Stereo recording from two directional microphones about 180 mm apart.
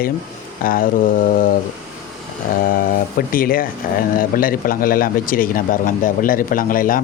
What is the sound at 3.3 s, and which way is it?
Speech, 50° left (ahead or behind).